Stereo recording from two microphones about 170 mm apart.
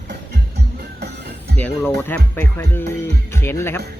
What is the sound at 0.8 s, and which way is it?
Music, 75° right (ahead or behind).